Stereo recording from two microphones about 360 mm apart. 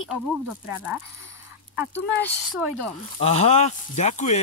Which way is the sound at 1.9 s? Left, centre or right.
Centre.